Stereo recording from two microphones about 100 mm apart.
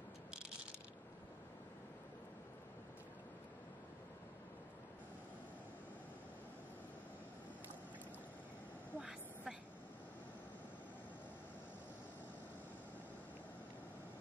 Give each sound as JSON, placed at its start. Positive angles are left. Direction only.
{"t": 8.9, "sound": "vehicle", "side_deg": -15}